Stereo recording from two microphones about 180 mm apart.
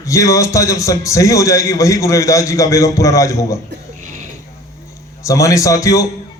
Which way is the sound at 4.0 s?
45° right (ahead or behind).